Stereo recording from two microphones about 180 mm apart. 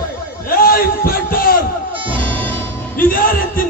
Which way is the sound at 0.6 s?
55° left (ahead or behind).